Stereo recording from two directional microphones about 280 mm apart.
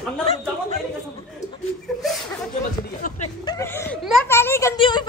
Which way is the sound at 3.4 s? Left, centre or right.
Centre.